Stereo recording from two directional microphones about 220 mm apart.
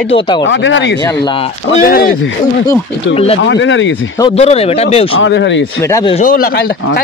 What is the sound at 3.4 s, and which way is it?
Speech, 55° left (ahead or behind).